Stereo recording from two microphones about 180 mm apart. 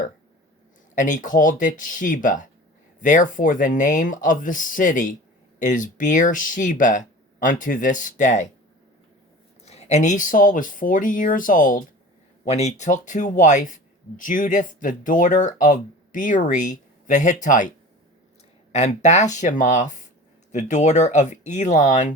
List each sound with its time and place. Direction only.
0.9 s speech: 45° left (ahead or behind)
9.6 s speech: 35° left (ahead or behind)
12.5 s speech: 35° left (ahead or behind)
18.7 s speech: 40° left (ahead or behind)